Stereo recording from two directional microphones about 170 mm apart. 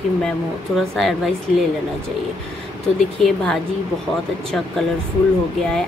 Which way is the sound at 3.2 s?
5° left (ahead or behind).